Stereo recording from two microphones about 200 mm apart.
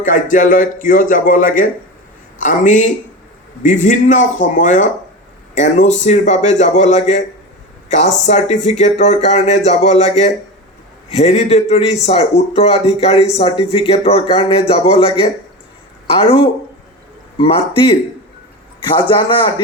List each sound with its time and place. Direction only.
0.0 s a man's voice: 40° left (ahead or behind); by 19.5 s 25° left (ahead or behind)